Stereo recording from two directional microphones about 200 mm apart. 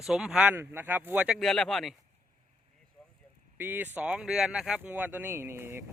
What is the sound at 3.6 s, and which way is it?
Speech, 10° right (ahead or behind).